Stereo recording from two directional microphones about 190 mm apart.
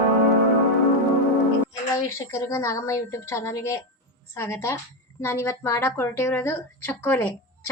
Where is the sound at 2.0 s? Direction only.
15° left (ahead or behind).